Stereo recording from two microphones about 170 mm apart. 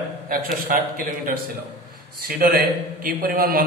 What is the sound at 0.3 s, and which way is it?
A man's voice, 55° right (ahead or behind).